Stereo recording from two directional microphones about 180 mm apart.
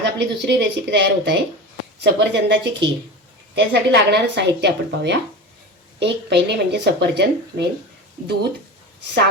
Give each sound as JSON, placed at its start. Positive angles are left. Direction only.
{"t": 0.0, "sound": "a woman's voice", "side_deg": -75}